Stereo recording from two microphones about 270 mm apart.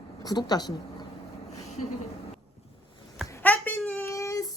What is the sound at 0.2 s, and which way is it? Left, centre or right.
Speech, centre.